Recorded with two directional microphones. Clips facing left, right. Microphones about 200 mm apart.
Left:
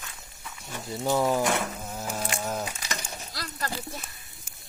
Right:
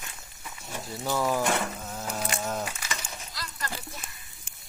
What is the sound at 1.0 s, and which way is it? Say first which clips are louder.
Speech: left 3 dB; 20° left (ahead or behind).